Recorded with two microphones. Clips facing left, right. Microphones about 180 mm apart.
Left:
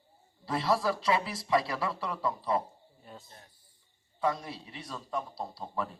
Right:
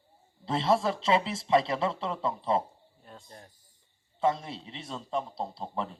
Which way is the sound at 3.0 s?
5° left (ahead or behind).